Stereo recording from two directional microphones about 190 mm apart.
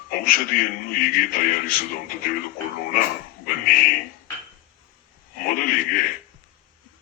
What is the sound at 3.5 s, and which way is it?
Speech, 50° left (ahead or behind).